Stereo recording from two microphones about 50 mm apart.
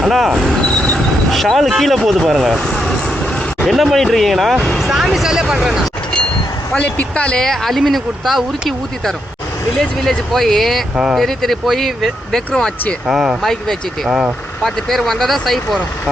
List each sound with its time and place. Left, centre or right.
0.0 s speech: centre
2.6 s vehicle: centre
3.6 s speech: centre
6.7 s speech: left
7.3 s speech: centre
9.7 s speech: centre
13.1 s speech: centre
13.4 s speech: centre